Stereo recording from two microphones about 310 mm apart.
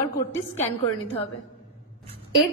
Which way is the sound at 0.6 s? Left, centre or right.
Centre.